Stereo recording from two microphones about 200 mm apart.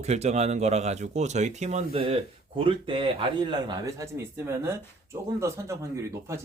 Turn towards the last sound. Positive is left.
turn(degrees=-15)  # may be behind; listen again after turning